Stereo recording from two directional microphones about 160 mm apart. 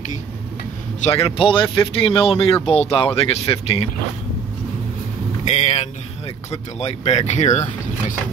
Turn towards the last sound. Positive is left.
turn(degrees=45)  # may be behind; listen again after turning